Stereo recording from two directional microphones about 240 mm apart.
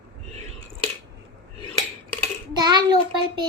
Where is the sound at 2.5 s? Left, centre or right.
Centre.